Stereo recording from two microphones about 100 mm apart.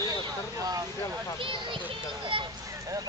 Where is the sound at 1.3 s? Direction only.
55° right (ahead or behind).